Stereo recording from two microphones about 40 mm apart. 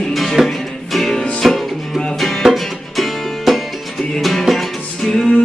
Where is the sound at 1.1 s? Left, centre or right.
Centre.